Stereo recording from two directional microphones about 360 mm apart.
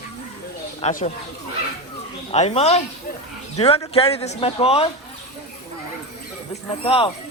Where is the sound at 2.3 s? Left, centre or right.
Centre.